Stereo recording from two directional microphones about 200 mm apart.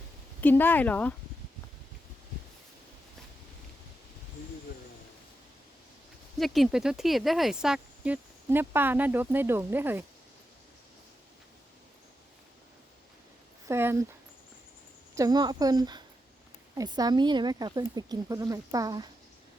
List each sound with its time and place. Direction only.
0.4 s speech: 10° left (ahead or behind)
6.4 s speech: centre (ahead or behind)
13.7 s speech: 10° right (ahead or behind)
15.1 s speech: 20° right (ahead or behind)